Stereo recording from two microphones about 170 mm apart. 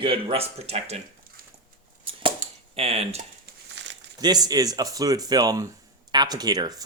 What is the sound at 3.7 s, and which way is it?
Crumpling, 90° right.